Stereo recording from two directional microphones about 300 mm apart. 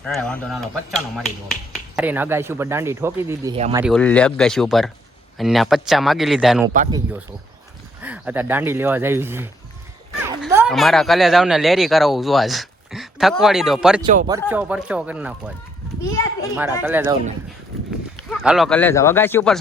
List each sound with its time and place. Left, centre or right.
0.0 s speech: centre
3.8 s speech: centre
8.0 s speech: centre
14.0 s speech: right
14.3 s speech: centre
16.0 s a child's voice: centre
16.8 s speech: centre
18.2 s speech: centre